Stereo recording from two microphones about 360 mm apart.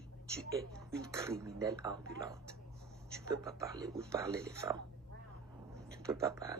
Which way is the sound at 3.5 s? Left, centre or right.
Centre.